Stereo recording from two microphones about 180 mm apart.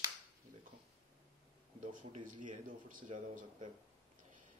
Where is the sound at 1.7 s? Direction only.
45° right (ahead or behind).